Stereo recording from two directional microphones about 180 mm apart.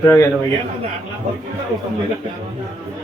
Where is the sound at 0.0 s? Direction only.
15° left (ahead or behind).